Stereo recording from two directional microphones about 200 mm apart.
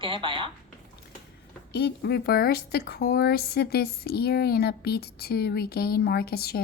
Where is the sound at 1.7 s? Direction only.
55° left (ahead or behind).